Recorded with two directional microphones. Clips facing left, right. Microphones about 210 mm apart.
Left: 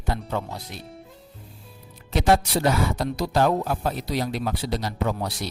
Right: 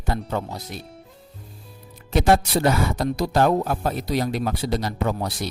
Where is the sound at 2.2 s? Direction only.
50° right (ahead or behind).